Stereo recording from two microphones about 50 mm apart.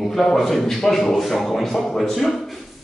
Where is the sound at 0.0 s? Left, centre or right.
Centre.